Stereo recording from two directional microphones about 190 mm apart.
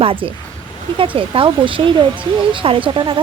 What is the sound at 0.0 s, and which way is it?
A woman's voice, 30° right (ahead or behind).